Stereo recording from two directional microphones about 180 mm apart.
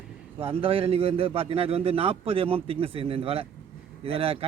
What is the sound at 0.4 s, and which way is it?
A man's voice, 30° right (ahead or behind).